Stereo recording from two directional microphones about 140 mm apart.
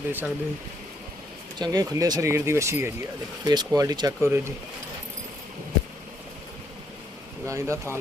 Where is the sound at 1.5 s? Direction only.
30° right (ahead or behind).